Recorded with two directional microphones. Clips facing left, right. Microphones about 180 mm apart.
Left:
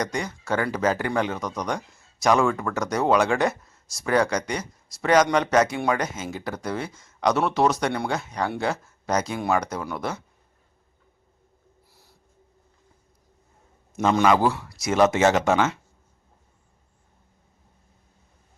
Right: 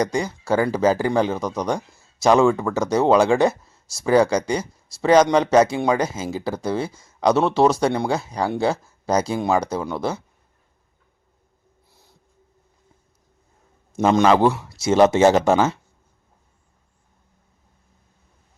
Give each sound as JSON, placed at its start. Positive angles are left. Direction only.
{"t": 0.0, "sound": "speech", "side_deg": -30}
{"t": 11.9, "sound": "a sound", "side_deg": -20}
{"t": 13.9, "sound": "speech", "side_deg": -25}